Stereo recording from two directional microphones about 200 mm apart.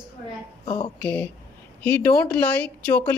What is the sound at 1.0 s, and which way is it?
Speech, 5° left (ahead or behind).